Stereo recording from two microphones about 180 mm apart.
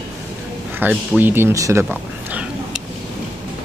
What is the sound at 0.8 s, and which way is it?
Speech, 10° right (ahead or behind).